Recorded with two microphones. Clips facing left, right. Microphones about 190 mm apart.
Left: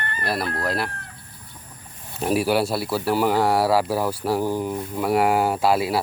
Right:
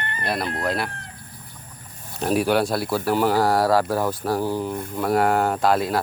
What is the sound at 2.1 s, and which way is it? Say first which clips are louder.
Chicken: even; 5° left (ahead or behind).